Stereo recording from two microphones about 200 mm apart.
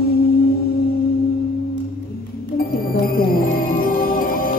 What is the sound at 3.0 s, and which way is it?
Music, 45° left (ahead or behind).